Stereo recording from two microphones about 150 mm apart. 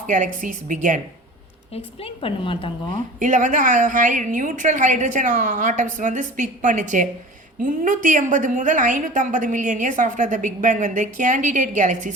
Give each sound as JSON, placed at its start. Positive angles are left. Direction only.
{"t": 0.4, "sound": "a woman's voice", "side_deg": -60}
{"t": 1.7, "sound": "a woman's voice", "side_deg": 40}
{"t": 3.2, "sound": "a woman's voice", "side_deg": -55}